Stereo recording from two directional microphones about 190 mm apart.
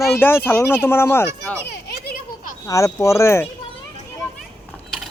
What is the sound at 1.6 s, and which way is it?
Children playing, 50° left (ahead or behind).